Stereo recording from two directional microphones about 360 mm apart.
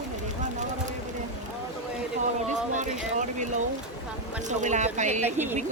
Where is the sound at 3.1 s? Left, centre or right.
Centre.